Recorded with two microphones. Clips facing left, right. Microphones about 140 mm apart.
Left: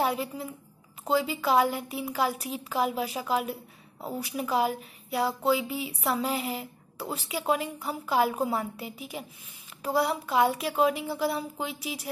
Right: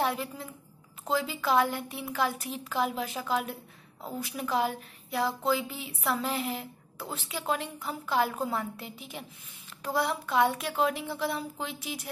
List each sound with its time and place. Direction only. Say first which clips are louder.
0.0 s a woman's voice: left 2 dB; centre (ahead or behind)